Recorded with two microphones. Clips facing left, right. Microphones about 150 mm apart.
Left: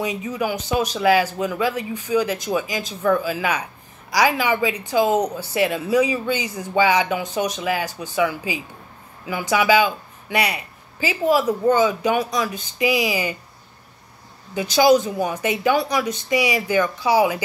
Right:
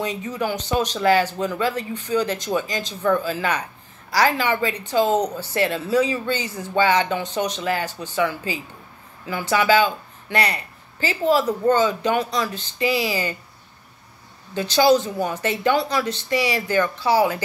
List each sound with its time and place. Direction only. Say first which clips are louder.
0.0 s speech: left 1 dB; 10° left (ahead or behind)
14.5 s speech: left 1 dB; 10° left (ahead or behind)